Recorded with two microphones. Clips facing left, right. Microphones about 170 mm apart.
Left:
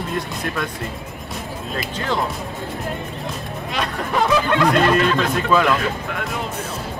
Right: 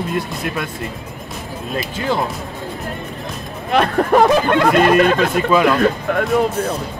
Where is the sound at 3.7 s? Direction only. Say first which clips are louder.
Right 10 dB; 50° right (ahead or behind).